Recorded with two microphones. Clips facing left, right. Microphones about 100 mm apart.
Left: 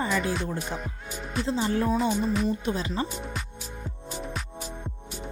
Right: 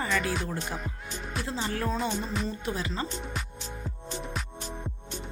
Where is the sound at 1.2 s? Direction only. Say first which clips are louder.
Left 5 dB; centre (ahead or behind).